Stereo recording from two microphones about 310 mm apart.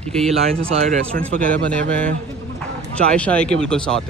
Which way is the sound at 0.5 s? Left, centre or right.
Centre.